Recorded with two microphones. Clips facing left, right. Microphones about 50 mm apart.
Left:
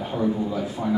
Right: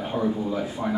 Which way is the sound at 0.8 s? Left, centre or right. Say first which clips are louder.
Left 3 dB; right.